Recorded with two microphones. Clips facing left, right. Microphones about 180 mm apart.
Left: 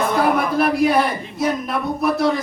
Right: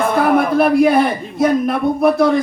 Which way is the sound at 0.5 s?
55° right (ahead or behind).